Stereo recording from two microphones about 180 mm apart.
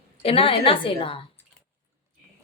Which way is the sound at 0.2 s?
30° left (ahead or behind).